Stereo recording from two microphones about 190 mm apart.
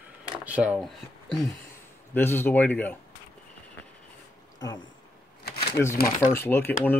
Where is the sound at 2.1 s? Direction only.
10° left (ahead or behind).